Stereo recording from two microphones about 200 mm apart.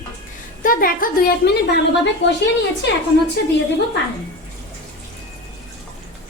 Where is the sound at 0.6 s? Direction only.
45° left (ahead or behind).